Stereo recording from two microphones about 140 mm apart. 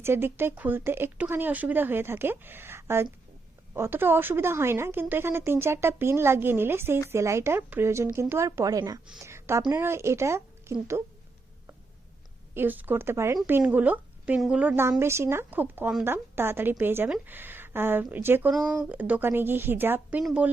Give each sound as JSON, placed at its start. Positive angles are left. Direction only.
{"t": 0.0, "sound": "a woman's voice", "side_deg": -15}
{"t": 12.5, "sound": "a woman's voice", "side_deg": -15}
{"t": 14.7, "sound": "a woman's voice", "side_deg": -20}